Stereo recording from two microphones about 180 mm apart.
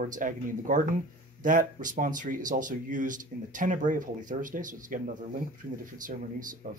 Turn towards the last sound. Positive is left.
turn(degrees=-45)  # may be behind; listen again after turning